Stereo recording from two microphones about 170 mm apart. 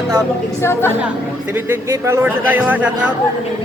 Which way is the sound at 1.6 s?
15° right (ahead or behind).